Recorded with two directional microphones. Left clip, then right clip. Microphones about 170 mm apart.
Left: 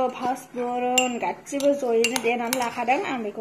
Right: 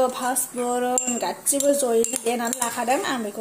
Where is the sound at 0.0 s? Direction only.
30° right (ahead or behind).